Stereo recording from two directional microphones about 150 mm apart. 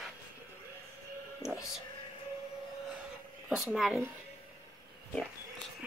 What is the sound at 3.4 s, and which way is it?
Speech, 5° right (ahead or behind).